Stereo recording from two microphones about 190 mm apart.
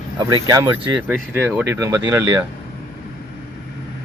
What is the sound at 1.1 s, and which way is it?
Speech, 10° right (ahead or behind).